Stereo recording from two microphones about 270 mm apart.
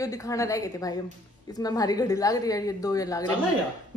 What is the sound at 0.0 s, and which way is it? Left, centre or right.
A woman's voice, centre.